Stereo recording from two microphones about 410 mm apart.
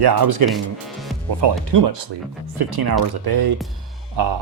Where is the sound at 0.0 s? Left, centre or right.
Right.